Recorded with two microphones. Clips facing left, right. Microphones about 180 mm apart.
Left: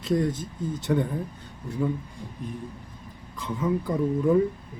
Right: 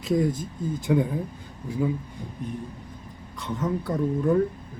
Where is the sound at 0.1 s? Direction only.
5° right (ahead or behind).